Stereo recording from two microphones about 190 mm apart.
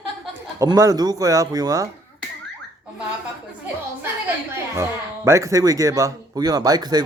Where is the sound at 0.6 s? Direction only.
15° right (ahead or behind).